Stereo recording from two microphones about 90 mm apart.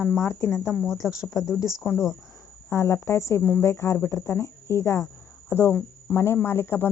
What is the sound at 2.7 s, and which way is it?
Speech, 30° left (ahead or behind).